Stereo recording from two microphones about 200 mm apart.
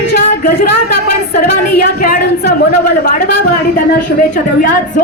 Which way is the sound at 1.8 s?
55° left (ahead or behind).